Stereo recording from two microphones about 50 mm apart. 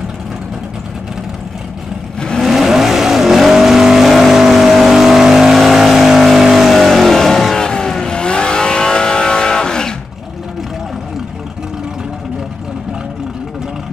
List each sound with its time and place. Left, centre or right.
2.1 s vehicle: centre
2.4 s vehicle: centre